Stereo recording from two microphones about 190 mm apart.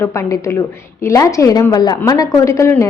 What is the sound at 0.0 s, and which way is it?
A woman's voice, 15° left (ahead or behind).